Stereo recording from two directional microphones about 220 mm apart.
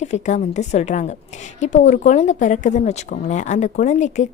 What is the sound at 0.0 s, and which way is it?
Speech, 30° left (ahead or behind).